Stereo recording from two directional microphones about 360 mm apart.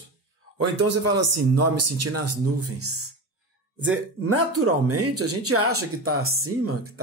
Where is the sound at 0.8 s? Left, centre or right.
Right.